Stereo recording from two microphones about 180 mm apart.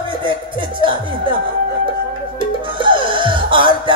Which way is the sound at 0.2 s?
25° right (ahead or behind).